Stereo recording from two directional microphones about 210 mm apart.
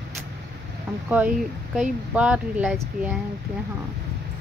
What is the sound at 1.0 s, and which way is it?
Speech, 5° right (ahead or behind).